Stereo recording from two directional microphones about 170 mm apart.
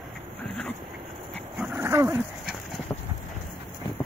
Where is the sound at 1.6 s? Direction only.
10° right (ahead or behind).